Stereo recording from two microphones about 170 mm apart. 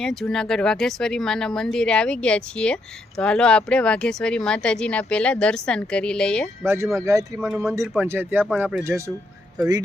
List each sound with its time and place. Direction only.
0.0 s speech: 5° left (ahead or behind)
6.6 s speech: 15° right (ahead or behind)
7.3 s speech: 5° right (ahead or behind)
8.0 s speech: 15° right (ahead or behind)